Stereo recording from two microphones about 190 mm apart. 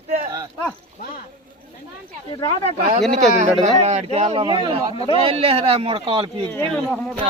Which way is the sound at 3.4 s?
35° right (ahead or behind).